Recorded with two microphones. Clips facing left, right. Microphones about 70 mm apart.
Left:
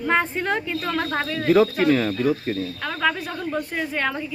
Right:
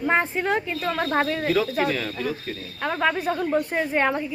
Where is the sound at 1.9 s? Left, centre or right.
Left.